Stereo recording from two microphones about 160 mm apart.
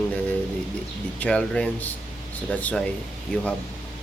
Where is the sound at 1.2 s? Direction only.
5° left (ahead or behind).